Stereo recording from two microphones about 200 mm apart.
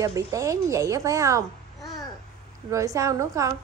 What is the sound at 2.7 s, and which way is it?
Speech, 15° right (ahead or behind).